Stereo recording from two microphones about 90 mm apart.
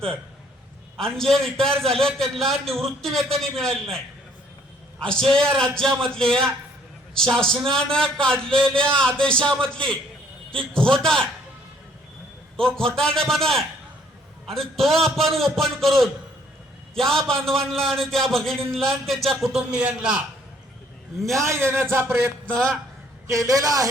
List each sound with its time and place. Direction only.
0.9 s a man's voice: 5° left (ahead or behind)
5.0 s speech: 5° left (ahead or behind)
12.5 s a man's voice: 5° left (ahead or behind)
21.3 s a man's voice: 30° right (ahead or behind)
22.5 s speech: 5° left (ahead or behind)
23.2 s a man's voice: 35° right (ahead or behind)